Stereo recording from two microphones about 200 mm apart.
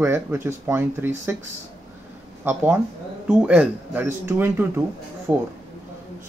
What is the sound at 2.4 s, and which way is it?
Speech, 10° right (ahead or behind).